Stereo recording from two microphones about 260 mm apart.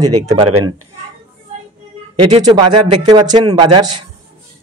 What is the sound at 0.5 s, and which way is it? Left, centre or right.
Speech, right.